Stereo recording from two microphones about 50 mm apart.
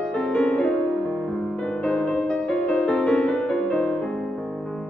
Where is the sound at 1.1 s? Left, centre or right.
Centre.